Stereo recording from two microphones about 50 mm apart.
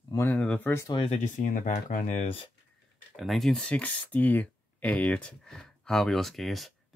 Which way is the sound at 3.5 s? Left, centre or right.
Left.